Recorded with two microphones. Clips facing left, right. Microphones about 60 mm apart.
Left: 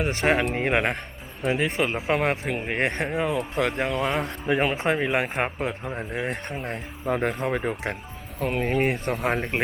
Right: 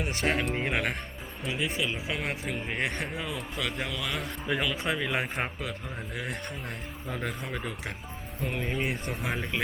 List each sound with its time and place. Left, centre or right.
0.0 s speech: left
3.3 s speech: left
6.6 s speech: left
9.1 s speech: left